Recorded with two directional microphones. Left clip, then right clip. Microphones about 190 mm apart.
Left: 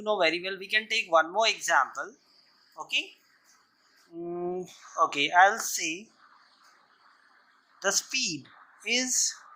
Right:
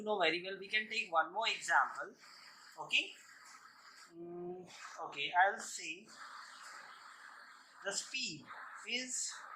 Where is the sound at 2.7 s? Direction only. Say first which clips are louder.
Left 5 dB; 35° left (ahead or behind).